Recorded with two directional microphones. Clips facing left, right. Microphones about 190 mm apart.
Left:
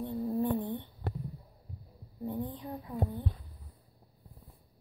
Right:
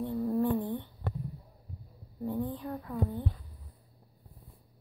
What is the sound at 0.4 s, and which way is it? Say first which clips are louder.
Humming: right 1 dB; 20° left (ahead or behind).